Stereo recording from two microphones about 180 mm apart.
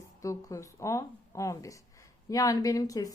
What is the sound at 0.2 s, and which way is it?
Speech, 15° left (ahead or behind).